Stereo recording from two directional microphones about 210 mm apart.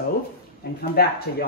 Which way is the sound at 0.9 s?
45° left (ahead or behind).